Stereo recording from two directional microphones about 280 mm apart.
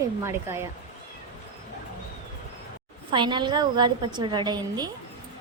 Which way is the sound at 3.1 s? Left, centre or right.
Centre.